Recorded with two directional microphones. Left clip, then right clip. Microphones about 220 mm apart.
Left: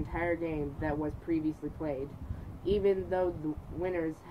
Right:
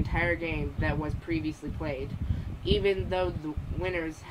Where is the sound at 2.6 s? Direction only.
Centre (ahead or behind).